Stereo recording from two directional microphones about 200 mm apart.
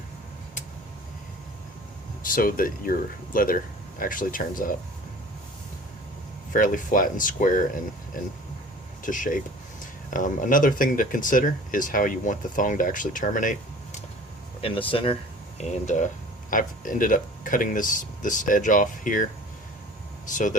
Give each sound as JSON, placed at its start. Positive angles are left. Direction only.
{"t": 2.2, "sound": "speech", "side_deg": 45}
{"t": 6.5, "sound": "speech", "side_deg": 40}
{"t": 9.0, "sound": "speech", "side_deg": 40}
{"t": 14.6, "sound": "speech", "side_deg": 25}